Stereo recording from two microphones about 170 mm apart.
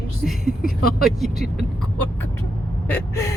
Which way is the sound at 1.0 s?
Centre (ahead or behind).